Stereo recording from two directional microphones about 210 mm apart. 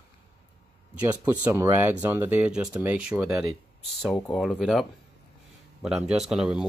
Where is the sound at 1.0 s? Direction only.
10° right (ahead or behind).